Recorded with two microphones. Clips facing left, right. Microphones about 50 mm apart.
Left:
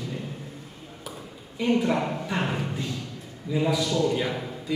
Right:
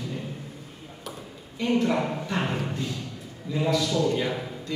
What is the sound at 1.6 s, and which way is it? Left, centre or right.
A man's voice, centre.